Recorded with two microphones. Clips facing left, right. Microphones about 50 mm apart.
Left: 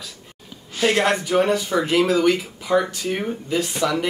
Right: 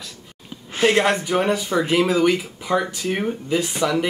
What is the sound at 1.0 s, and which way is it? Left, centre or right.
Speech, centre.